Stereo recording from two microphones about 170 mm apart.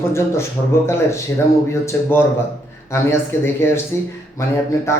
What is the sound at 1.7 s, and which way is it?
Speech, 15° left (ahead or behind).